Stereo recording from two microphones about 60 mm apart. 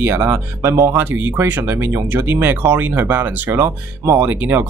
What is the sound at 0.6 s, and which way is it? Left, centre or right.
Speech, right.